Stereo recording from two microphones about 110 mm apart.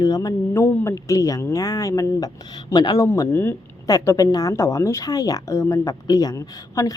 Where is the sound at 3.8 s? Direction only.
35° left (ahead or behind).